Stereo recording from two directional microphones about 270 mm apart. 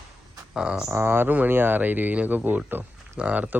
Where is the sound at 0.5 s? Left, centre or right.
Centre.